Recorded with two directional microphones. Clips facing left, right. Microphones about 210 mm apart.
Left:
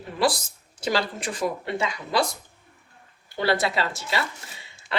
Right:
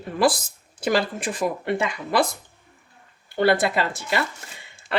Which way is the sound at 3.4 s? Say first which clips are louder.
Right 4 dB; 55° right (ahead or behind).